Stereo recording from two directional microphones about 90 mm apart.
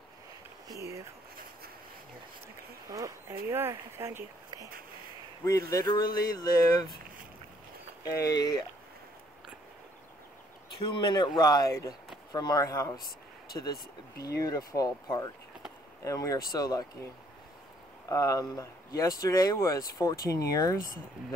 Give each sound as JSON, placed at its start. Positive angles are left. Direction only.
{"t": 0.7, "sound": "speech", "side_deg": -35}
{"t": 2.9, "sound": "speech", "side_deg": -35}
{"t": 5.4, "sound": "speech", "side_deg": 40}
{"t": 8.0, "sound": "speech", "side_deg": 40}
{"t": 10.8, "sound": "speech", "side_deg": 60}
{"t": 18.0, "sound": "speech", "side_deg": 40}